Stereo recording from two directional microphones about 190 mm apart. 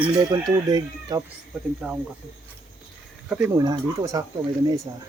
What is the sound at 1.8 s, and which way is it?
Speech, 5° right (ahead or behind).